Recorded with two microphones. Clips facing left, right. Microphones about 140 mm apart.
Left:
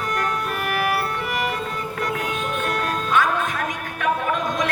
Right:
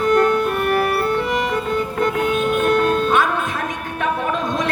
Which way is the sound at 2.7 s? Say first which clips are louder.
Right 6 dB; 25° right (ahead or behind).